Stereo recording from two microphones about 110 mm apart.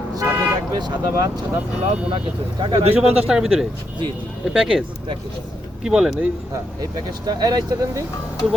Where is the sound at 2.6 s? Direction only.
45° right (ahead or behind).